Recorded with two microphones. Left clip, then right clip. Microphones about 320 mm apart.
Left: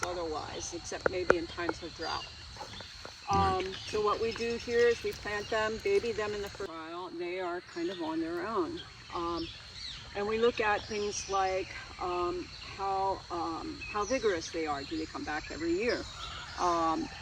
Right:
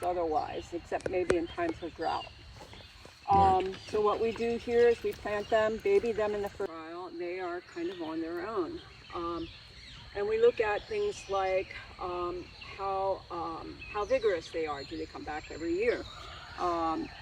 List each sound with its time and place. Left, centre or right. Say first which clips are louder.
0.0 s speech: right 5 dB; right
3.2 s speech: right 5 dB; right
6.7 s a sound: left 1 dB; left
8.0 s speech: left 1 dB; left